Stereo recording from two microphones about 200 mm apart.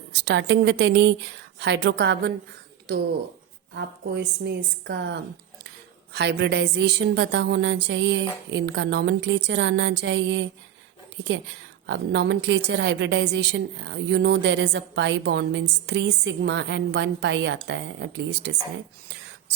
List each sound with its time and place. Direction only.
0.1 s a woman's voice: 60° right (ahead or behind)